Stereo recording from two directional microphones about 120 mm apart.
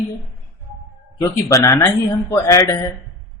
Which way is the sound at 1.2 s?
30° left (ahead or behind).